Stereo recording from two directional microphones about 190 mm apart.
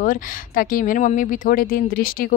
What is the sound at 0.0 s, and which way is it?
Speech, 45° left (ahead or behind).